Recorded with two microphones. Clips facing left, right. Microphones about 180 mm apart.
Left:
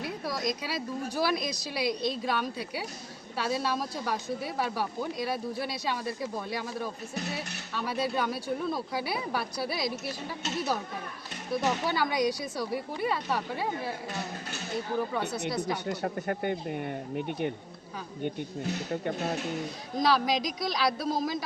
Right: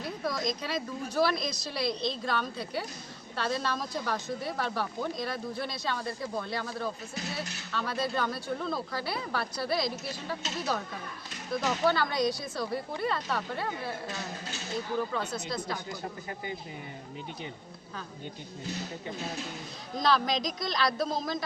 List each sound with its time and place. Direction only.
0.0 s a woman's voice: 10° left (ahead or behind)
11.5 s a woman's voice: 10° left (ahead or behind)
15.4 s a woman's voice: 15° left (ahead or behind)
15.9 s speech: 65° left (ahead or behind)
19.0 s speech: 60° left (ahead or behind)
20.0 s a woman's voice: 10° left (ahead or behind)